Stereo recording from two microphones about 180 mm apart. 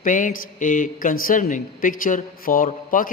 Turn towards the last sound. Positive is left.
turn(degrees=50)  # may be behind; listen again after turning